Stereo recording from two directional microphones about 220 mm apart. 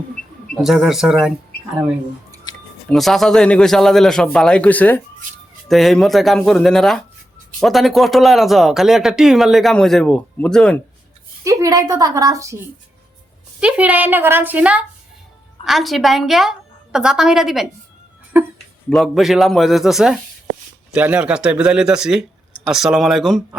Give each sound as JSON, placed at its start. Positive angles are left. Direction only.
{"t": 0.5, "sound": "speech", "side_deg": 0}
{"t": 2.5, "sound": "music", "side_deg": 20}
{"t": 2.9, "sound": "speech", "side_deg": 0}
{"t": 11.4, "sound": "a woman's voice", "side_deg": -15}
{"t": 13.6, "sound": "a woman's voice", "side_deg": -5}
{"t": 18.9, "sound": "speech", "side_deg": 0}